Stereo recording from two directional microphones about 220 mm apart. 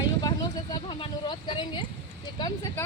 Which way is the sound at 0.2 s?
20° left (ahead or behind).